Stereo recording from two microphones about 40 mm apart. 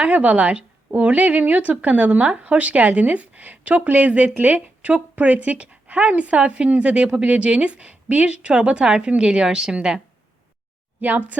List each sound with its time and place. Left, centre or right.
0.0 s speech: right; by 10.0 s centre
11.0 s speech: right